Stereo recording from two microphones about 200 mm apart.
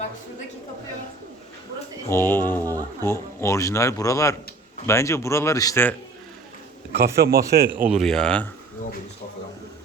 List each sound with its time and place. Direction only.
2.0 s speech: 10° left (ahead or behind)
6.9 s speech: 50° right (ahead or behind)
7.8 s speech: 5° right (ahead or behind)